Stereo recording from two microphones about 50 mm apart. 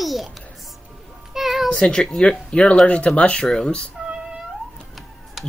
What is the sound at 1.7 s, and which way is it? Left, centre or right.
Speech, centre.